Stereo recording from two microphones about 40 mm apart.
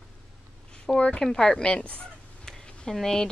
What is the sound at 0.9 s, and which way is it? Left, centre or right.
Speech, left.